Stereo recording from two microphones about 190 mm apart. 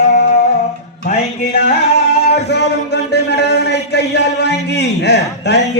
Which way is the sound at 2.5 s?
60° left (ahead or behind).